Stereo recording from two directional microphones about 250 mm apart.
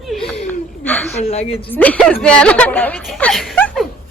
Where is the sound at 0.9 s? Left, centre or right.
Centre.